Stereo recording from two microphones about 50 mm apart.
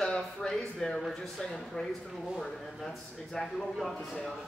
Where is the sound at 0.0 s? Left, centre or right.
Centre.